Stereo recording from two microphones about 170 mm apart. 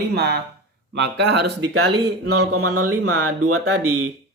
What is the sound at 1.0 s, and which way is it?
Speech, 85° right.